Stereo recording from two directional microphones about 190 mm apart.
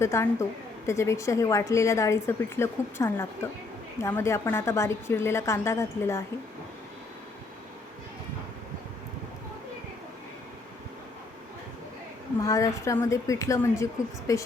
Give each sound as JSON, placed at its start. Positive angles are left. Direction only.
{"t": 0.0, "sound": "a woman's voice", "side_deg": 15}
{"t": 12.4, "sound": "a woman's voice", "side_deg": 15}